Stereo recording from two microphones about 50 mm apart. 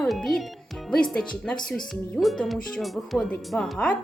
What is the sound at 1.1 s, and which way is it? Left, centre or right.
Speech, centre.